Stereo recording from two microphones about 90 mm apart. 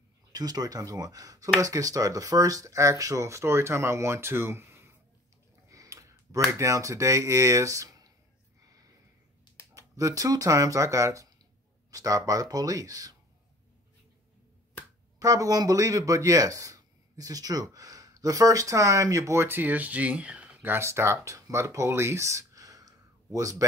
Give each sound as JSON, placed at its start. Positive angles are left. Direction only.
{"t": 0.3, "sound": "speech", "side_deg": -45}
{"t": 5.7, "sound": "a sound", "side_deg": -35}
{"t": 6.5, "sound": "speech", "side_deg": -35}
{"t": 9.8, "sound": "speech", "side_deg": -35}
{"t": 15.1, "sound": "speech", "side_deg": -40}